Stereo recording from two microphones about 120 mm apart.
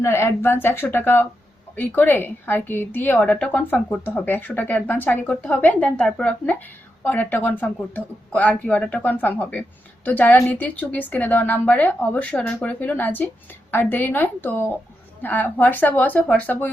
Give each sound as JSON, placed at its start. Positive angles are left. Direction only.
{"t": 0.0, "sound": "speech", "side_deg": 20}